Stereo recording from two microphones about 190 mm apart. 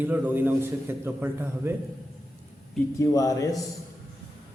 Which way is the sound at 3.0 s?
15° left (ahead or behind).